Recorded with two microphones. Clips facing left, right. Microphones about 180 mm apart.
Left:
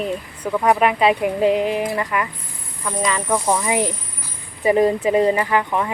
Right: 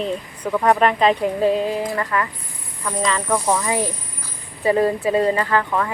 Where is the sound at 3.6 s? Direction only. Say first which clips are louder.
Left 2 dB; 20° left (ahead or behind).